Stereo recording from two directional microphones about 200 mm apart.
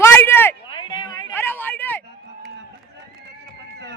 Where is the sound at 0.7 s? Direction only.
25° left (ahead or behind).